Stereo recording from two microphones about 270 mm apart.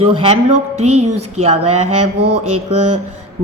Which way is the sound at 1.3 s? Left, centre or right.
Right.